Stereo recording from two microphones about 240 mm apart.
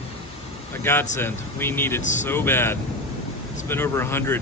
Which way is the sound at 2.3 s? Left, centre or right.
Centre.